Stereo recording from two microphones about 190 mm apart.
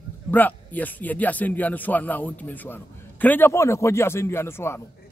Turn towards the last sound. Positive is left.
turn(degrees=10)  # may be behind; listen again after turning